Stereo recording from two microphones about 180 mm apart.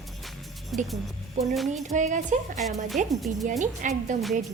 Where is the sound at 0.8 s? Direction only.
Centre (ahead or behind).